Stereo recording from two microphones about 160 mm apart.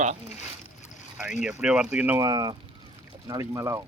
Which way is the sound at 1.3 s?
5° right (ahead or behind).